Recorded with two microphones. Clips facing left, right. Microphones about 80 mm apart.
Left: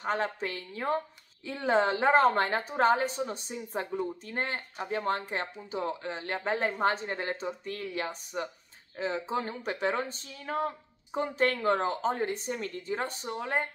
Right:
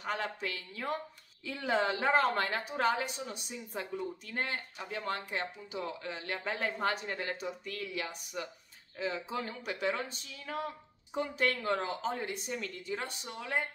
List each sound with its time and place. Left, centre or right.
0.0 s a woman's voice: left